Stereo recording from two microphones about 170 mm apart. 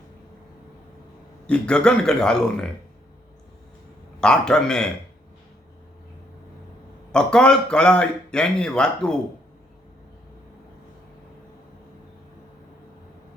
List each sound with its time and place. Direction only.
1.5 s speech: 5° left (ahead or behind)
4.2 s speech: 5° left (ahead or behind)
7.1 s speech: 5° left (ahead or behind)